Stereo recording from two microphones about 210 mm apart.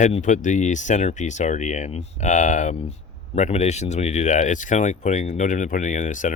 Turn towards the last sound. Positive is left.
turn(degrees=35)  # may be behind; listen again after turning